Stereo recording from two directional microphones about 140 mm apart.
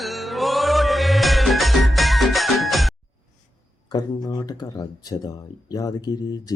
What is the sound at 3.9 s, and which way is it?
Speech, 30° left (ahead or behind).